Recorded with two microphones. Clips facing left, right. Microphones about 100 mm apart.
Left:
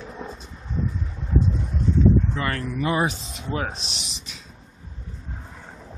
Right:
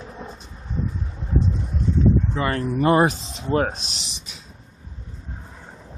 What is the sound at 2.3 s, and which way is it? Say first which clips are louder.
Speech: right 4 dB; 25° right (ahead or behind).